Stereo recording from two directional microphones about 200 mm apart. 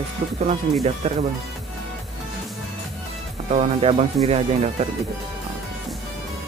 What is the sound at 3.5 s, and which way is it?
Speech, 30° right (ahead or behind).